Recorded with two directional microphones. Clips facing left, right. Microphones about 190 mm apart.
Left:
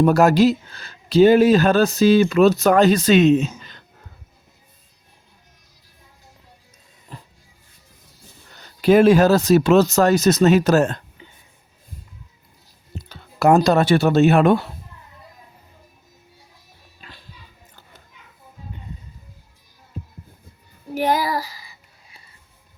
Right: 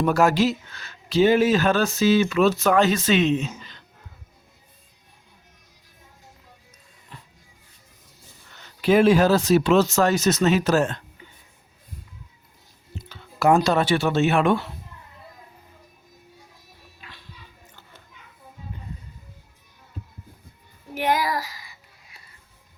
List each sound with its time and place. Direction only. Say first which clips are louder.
0.0 s speech: left 5 dB; 40° left (ahead or behind)
8.4 s speech: left 5 dB; 35° left (ahead or behind)
13.1 s speech: left 3 dB; 40° left (ahead or behind)
17.0 s music: left 2 dB; 35° left (ahead or behind)
20.9 s speech: left 3 dB; 30° left (ahead or behind)